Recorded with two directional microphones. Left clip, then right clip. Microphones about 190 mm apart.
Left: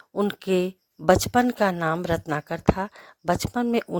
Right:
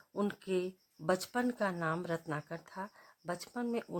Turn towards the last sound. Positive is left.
turn(degrees=40)  # may be behind; listen again after turning